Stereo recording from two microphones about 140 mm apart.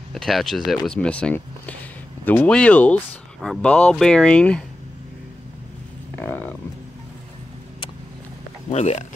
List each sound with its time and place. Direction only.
0.1 s speech: centre (ahead or behind)
6.1 s a sound: 10° left (ahead or behind)
8.6 s speech: 50° left (ahead or behind)